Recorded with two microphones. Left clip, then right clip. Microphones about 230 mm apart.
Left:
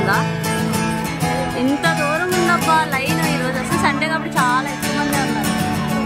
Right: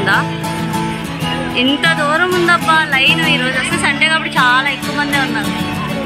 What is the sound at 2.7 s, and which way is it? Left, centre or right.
Speech, centre.